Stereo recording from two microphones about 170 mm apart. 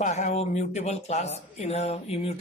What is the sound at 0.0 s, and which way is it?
Speech, 45° left (ahead or behind).